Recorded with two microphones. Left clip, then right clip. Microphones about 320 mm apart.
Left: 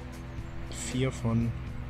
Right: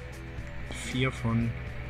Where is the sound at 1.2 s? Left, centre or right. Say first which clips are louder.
Even; centre.